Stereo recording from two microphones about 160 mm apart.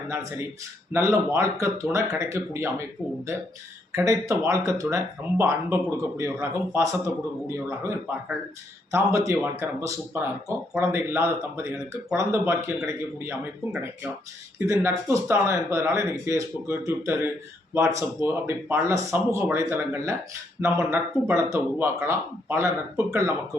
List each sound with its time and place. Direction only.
0.1 s speech: 15° right (ahead or behind)
3.9 s speech: 20° right (ahead or behind)